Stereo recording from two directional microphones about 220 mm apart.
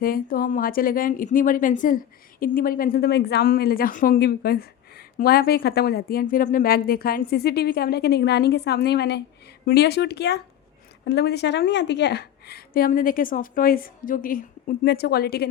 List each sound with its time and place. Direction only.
0.0 s a woman's voice: 40° left (ahead or behind)